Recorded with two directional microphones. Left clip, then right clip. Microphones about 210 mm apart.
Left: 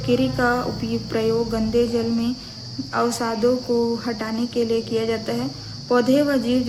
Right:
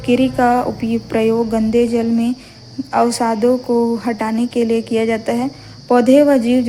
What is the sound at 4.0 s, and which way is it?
Cricket, 30° right (ahead or behind).